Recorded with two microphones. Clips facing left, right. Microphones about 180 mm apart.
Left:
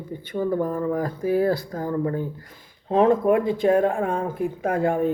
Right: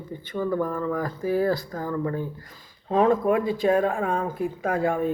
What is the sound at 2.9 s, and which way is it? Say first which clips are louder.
Speech: left 2 dB; 60° left (ahead or behind).